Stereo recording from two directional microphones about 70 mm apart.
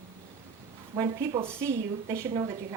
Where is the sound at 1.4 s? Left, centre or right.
Right.